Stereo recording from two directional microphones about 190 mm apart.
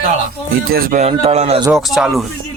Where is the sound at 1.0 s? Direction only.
35° right (ahead or behind).